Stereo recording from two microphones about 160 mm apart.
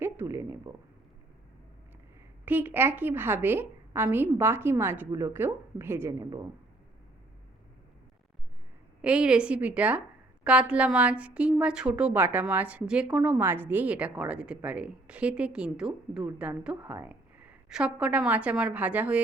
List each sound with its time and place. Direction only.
0.0 s speech: 15° right (ahead or behind)
2.4 s a woman's voice: 10° right (ahead or behind)
9.0 s a woman's voice: 5° right (ahead or behind)